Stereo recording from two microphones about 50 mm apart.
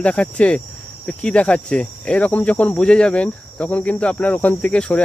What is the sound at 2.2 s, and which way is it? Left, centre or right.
Cricket, left.